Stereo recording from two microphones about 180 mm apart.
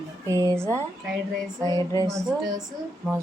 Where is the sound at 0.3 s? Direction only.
15° right (ahead or behind).